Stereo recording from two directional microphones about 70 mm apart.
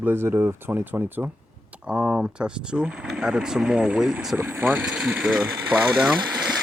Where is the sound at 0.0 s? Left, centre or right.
Right.